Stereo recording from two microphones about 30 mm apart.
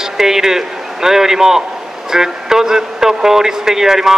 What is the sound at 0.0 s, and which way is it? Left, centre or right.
A man's voice, centre.